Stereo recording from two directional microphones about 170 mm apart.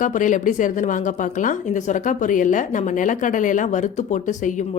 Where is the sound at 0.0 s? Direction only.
50° left (ahead or behind).